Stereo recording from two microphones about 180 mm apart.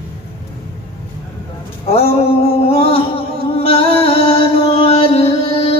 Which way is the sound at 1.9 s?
35° left (ahead or behind).